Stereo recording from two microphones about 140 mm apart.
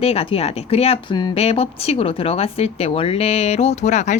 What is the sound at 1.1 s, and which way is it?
Speech, 30° left (ahead or behind).